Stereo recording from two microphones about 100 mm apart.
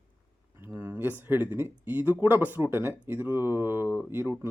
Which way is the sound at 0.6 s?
25° right (ahead or behind).